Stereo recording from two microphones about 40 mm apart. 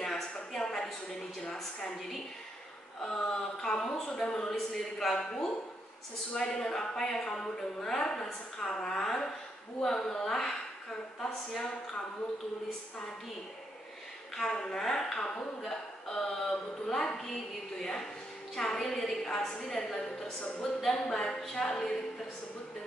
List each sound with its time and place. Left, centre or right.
0.0 s a sound: centre
3.0 s a woman's voice: centre
6.3 s a woman's voice: centre
14.3 s a woman's voice: centre